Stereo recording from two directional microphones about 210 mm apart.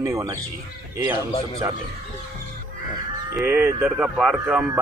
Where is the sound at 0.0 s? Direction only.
15° right (ahead or behind).